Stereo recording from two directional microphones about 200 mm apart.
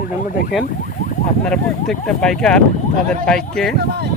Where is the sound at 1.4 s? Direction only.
5° left (ahead or behind).